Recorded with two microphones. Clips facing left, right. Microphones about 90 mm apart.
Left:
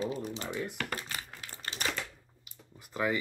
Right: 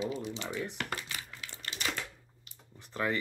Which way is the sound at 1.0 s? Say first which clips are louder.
Left 1 dB; 40° left (ahead or behind).